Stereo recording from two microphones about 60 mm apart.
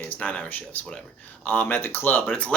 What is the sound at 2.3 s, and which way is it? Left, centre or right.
Speech, centre.